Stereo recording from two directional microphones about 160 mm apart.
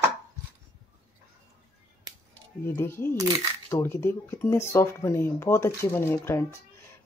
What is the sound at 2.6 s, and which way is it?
Speech, 15° left (ahead or behind).